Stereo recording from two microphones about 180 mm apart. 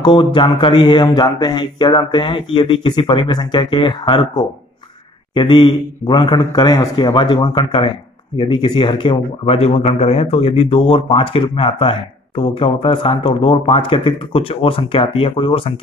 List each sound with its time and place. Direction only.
0.0 s speech: 25° left (ahead or behind)